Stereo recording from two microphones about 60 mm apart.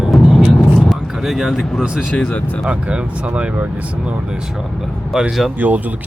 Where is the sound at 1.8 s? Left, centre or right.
Centre.